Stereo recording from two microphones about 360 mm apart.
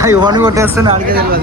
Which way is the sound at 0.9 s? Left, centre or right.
Right.